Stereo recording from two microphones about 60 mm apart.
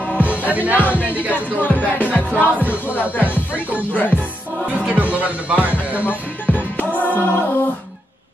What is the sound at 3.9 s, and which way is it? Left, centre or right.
Music, left.